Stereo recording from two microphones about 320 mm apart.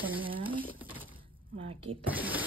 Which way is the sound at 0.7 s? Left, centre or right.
Centre.